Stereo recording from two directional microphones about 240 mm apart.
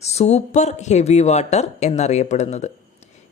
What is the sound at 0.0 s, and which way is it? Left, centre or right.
Speech, left.